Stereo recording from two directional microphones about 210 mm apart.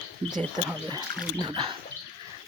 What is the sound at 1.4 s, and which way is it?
Speech, 25° right (ahead or behind).